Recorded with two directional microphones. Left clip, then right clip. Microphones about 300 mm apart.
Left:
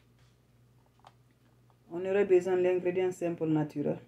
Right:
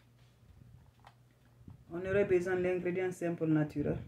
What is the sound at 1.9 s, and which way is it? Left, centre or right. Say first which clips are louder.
Speech: left 4 dB; centre.